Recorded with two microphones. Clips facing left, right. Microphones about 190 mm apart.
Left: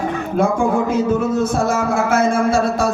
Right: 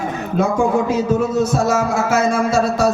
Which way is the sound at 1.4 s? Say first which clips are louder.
Right 1 dB; 55° left (ahead or behind).